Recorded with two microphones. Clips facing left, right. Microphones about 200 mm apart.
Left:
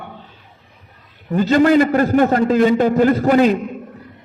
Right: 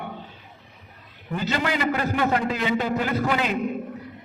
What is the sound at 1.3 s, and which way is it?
A man's voice, 45° left (ahead or behind).